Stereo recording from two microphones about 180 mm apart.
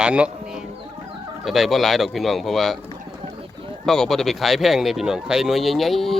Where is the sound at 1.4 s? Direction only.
Centre (ahead or behind).